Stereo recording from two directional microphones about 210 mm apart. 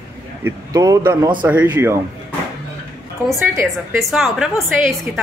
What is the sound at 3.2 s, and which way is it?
Speech, 10° right (ahead or behind).